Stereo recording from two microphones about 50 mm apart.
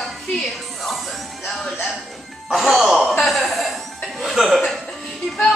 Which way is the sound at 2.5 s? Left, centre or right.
Centre.